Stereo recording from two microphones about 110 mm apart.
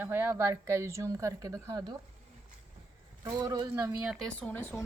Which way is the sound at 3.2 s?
35° right (ahead or behind).